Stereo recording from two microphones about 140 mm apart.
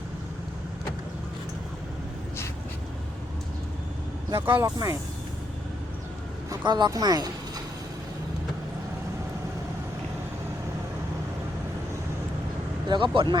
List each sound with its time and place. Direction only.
4.3 s speech: 15° right (ahead or behind)
6.7 s speech: 30° right (ahead or behind)
12.9 s speech: 35° right (ahead or behind)